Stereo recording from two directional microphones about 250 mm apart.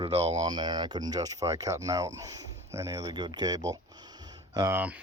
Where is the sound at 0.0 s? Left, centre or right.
Right.